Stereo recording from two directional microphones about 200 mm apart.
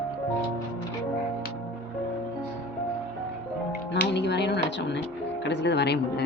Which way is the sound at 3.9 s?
60° left (ahead or behind).